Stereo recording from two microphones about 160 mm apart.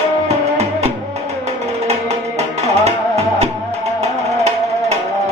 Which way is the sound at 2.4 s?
40° right (ahead or behind).